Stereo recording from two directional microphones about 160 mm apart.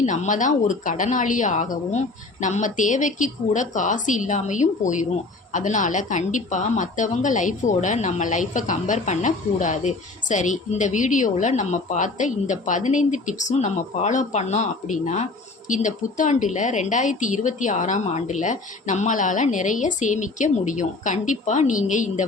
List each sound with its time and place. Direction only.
0.0 s a woman's voice: 50° left (ahead or behind)